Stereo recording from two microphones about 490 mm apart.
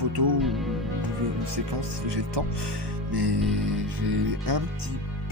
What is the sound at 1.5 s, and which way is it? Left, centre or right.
Speech, right.